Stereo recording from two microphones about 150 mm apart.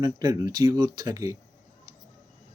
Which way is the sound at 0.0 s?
25° right (ahead or behind).